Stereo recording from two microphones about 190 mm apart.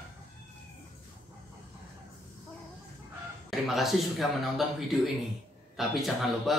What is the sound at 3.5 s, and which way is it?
Speech, centre (ahead or behind).